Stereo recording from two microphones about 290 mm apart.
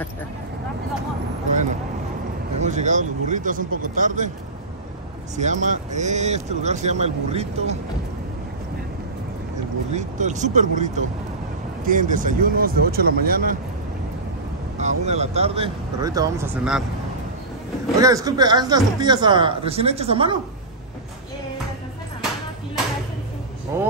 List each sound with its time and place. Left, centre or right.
2.6 s speech: right
5.3 s speech: right
9.9 s speech: right
14.8 s speech: right; by 16.8 s centre
17.9 s speech: centre
23.7 s speech: centre